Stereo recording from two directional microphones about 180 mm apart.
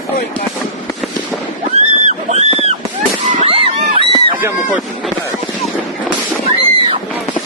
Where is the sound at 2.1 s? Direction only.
35° right (ahead or behind).